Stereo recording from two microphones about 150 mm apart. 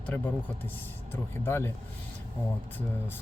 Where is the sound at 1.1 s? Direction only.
15° left (ahead or behind).